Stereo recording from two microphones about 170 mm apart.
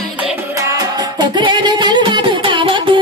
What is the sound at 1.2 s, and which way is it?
Music, 25° right (ahead or behind).